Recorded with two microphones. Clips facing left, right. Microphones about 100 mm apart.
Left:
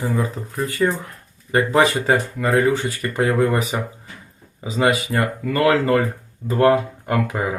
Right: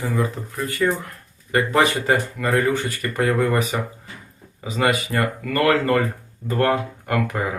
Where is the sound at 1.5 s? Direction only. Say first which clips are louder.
Left 2 dB; 25° left (ahead or behind).